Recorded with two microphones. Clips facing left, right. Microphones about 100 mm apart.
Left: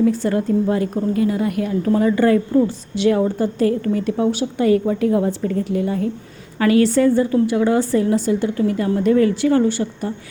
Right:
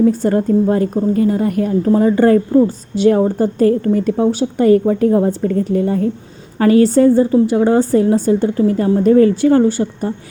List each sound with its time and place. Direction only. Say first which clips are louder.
0.0 s a woman's voice: right 4 dB; 40° right (ahead or behind)